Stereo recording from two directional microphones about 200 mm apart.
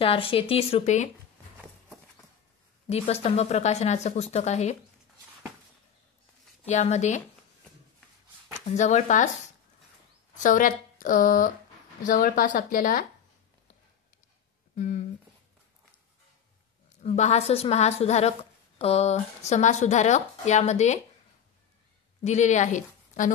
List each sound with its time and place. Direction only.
0.0 s speech: 25° left (ahead or behind)
2.9 s speech: 30° left (ahead or behind)
6.7 s speech: 35° left (ahead or behind)
8.7 s speech: 35° left (ahead or behind)
10.4 s speech: 40° left (ahead or behind)
14.8 s speech: 40° left (ahead or behind)
17.0 s speech: 35° left (ahead or behind)
22.2 s a woman's voice: 35° left (ahead or behind)